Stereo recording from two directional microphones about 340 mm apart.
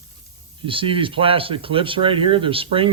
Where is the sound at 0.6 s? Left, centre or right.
Centre.